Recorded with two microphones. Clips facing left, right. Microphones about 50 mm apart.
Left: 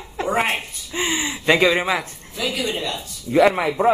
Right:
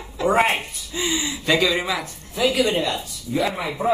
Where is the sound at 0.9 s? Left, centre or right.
Left.